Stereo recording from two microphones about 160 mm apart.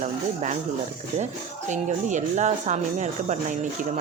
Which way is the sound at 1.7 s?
50° right (ahead or behind).